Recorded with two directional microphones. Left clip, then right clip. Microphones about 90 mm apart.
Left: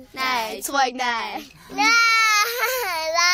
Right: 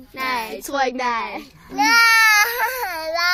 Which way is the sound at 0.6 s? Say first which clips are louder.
Even; centre (ahead or behind).